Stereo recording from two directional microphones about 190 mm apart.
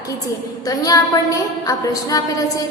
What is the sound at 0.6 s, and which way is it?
A woman's voice, 20° left (ahead or behind).